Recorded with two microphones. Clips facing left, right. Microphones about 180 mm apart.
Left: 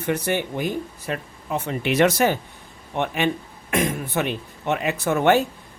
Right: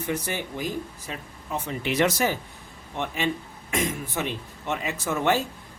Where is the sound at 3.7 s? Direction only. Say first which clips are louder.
Left 5 dB; 65° left (ahead or behind).